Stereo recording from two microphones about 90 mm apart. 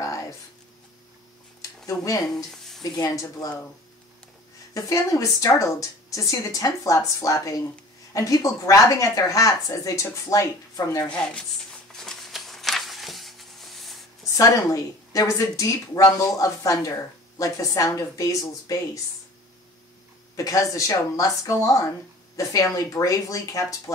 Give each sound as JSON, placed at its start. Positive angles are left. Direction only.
{"t": 1.9, "sound": "a woman's voice", "side_deg": 40}
{"t": 4.7, "sound": "a woman's voice", "side_deg": 35}
{"t": 12.0, "sound": "a sound", "side_deg": 5}
{"t": 14.3, "sound": "a woman's voice", "side_deg": 40}
{"t": 20.3, "sound": "a woman's voice", "side_deg": 40}